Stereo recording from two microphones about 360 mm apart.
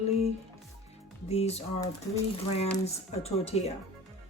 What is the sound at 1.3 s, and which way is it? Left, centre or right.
Speech, centre.